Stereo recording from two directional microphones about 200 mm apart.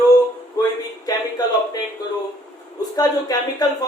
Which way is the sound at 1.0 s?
20° left (ahead or behind).